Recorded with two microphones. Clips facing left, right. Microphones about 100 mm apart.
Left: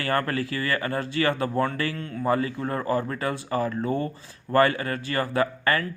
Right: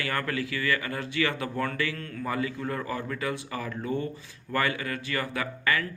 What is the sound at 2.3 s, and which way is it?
Speech, 40° left (ahead or behind).